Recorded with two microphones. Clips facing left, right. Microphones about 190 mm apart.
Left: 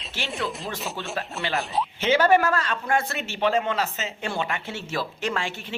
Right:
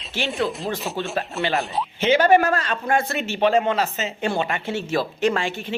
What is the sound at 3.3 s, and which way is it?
Speech, 20° right (ahead or behind).